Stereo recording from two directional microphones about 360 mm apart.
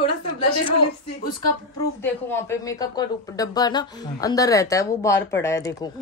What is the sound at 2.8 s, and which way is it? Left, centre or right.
Speech, centre.